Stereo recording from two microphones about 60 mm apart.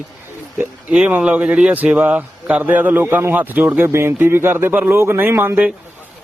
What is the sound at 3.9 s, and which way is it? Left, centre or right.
A man's voice, right.